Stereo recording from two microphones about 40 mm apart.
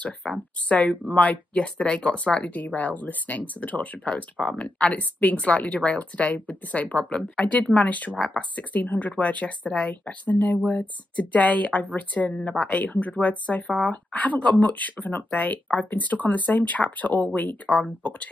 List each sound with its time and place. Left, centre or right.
0.0 s speech: left
4.1 s speech: left
7.0 s speech: left
7.5 s speech: left
8.8 s speech: left
9.1 s speech: left
10.2 s speech: left
12.6 s speech: left